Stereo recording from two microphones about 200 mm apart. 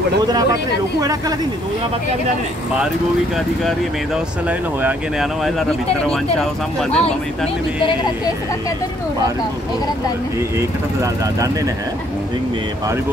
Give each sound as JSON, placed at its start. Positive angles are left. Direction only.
{"t": 0.3, "sound": "speech", "side_deg": -20}
{"t": 3.6, "sound": "speech", "side_deg": -5}
{"t": 11.0, "sound": "speech", "side_deg": -15}